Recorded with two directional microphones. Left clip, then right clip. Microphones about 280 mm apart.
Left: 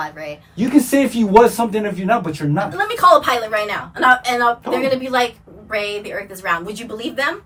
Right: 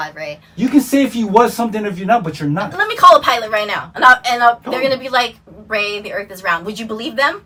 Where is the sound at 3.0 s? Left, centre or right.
Right.